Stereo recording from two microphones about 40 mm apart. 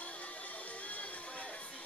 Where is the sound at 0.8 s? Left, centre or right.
Left.